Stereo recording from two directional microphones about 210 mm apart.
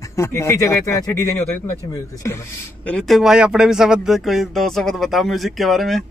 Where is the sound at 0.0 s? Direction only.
15° left (ahead or behind).